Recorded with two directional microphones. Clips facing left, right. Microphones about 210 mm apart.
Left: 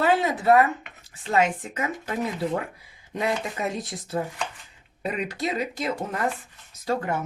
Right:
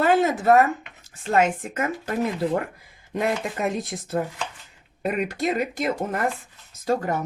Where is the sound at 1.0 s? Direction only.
50° right (ahead or behind).